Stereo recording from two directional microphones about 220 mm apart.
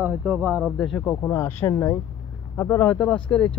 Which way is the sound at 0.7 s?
Centre (ahead or behind).